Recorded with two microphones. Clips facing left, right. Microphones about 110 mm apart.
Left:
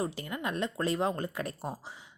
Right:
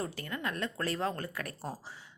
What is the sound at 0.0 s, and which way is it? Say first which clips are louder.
A woman's voice: left 3 dB; 20° left (ahead or behind).